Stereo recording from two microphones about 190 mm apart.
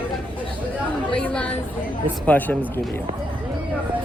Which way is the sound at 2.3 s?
10° left (ahead or behind).